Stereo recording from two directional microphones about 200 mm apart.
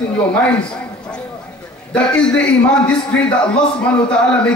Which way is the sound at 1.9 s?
5° left (ahead or behind).